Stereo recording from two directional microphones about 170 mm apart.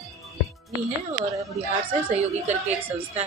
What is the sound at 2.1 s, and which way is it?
Speech, 40° right (ahead or behind).